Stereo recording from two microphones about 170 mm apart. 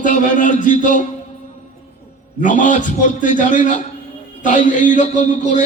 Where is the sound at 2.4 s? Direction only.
50° left (ahead or behind).